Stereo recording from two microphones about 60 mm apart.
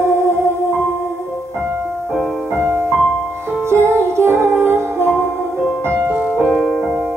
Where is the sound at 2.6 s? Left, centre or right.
Right.